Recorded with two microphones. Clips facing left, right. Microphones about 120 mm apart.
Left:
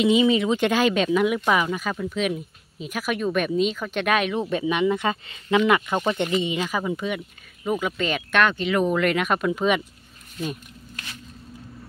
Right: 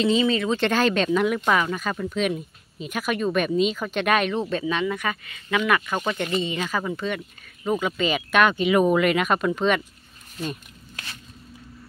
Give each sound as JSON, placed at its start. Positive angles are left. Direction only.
{"t": 0.0, "sound": "speech", "side_deg": 15}